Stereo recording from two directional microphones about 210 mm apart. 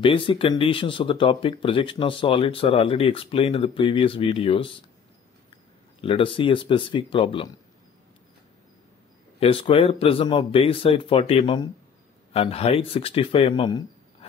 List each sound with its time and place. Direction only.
0.0 s speech: 25° left (ahead or behind)
5.9 s speech: 25° left (ahead or behind)
9.4 s speech: 25° left (ahead or behind)